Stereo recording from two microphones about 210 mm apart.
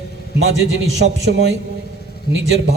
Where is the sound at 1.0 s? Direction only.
55° right (ahead or behind).